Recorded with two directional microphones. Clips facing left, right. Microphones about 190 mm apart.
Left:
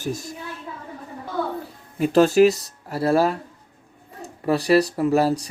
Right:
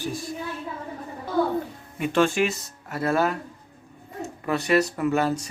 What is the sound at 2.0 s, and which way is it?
Speech, 40° left (ahead or behind).